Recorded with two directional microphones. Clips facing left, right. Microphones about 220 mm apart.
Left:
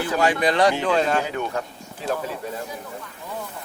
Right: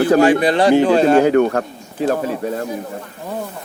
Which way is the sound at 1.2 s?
60° right (ahead or behind).